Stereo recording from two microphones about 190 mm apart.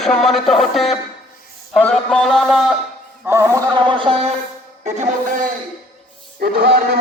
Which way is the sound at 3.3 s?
15° right (ahead or behind).